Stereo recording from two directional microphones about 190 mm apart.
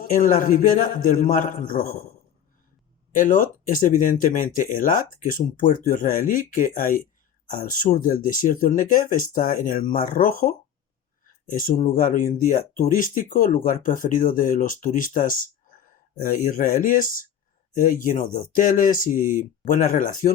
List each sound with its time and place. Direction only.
0.0 s speech: 45° left (ahead or behind)
3.2 s speech: 45° left (ahead or behind)